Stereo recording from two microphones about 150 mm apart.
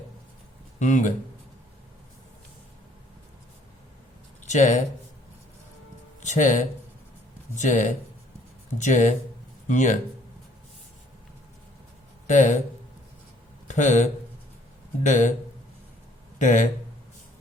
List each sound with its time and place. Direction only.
0.8 s speech: 55° left (ahead or behind)
4.4 s speech: 50° left (ahead or behind)
6.2 s speech: 55° left (ahead or behind)
12.3 s speech: 55° left (ahead or behind)
13.7 s speech: 55° left (ahead or behind)
16.4 s speech: 55° left (ahead or behind)